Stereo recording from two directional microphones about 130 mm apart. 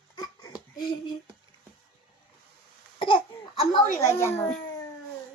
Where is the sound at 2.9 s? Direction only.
40° left (ahead or behind).